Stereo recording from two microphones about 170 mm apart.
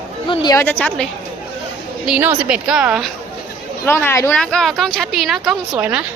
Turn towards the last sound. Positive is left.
turn(degrees=-5)  # may be behind; listen again after turning